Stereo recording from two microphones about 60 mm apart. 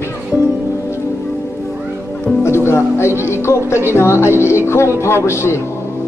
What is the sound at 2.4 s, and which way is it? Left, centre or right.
Music, left.